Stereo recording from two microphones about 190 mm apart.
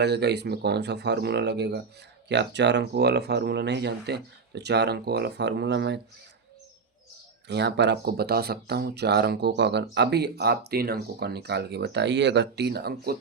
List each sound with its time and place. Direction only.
0.0 s speech: 60° right (ahead or behind)
7.4 s speech: 65° right (ahead or behind)